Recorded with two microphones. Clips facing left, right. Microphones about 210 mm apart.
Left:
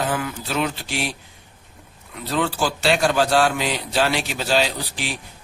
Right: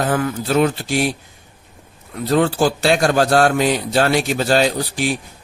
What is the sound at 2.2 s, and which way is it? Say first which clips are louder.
A man's voice: right 7 dB; 45° right (ahead or behind).